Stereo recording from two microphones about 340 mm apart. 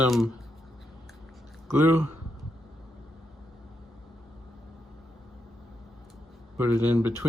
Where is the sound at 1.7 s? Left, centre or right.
Centre.